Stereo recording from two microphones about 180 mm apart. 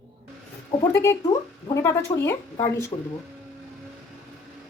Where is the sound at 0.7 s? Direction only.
15° left (ahead or behind).